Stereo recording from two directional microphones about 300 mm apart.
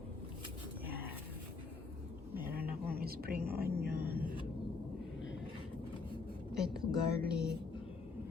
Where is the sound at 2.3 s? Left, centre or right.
Centre.